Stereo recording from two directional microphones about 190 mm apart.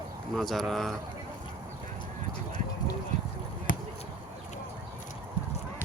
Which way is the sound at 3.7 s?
80° left.